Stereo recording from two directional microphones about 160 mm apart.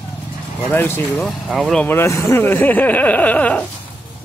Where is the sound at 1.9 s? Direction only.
15° left (ahead or behind).